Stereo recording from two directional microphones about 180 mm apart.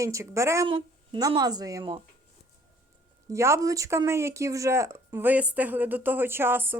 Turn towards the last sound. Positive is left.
turn(degrees=-10)  # may be behind; listen again after turning